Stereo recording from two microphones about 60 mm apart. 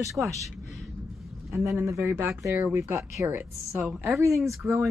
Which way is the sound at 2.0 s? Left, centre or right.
Right.